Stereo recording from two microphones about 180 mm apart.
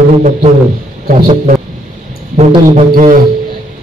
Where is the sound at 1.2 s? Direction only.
35° right (ahead or behind).